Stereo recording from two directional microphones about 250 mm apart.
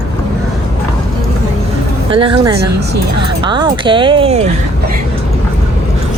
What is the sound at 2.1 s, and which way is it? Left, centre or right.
Speech, centre.